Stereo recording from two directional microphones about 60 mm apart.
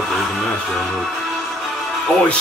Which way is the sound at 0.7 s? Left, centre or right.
Centre.